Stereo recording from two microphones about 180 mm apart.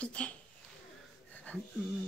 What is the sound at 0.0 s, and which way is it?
Speech, 5° left (ahead or behind).